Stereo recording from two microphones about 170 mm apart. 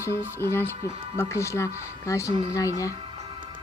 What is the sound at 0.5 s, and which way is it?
Speech, 15° left (ahead or behind).